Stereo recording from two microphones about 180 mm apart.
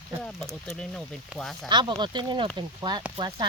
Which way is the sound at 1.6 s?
25° right (ahead or behind).